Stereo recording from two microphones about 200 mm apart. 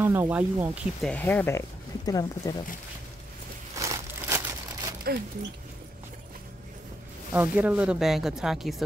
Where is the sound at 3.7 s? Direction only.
15° right (ahead or behind).